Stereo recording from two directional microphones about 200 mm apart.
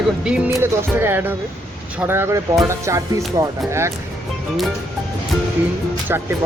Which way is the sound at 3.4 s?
15° right (ahead or behind).